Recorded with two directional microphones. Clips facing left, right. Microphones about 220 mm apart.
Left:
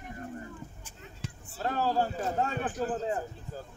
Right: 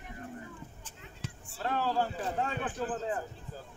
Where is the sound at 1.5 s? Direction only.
40° left (ahead or behind).